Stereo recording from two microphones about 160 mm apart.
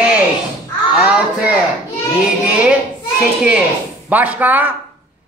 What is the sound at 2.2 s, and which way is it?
A man's voice, 5° right (ahead or behind).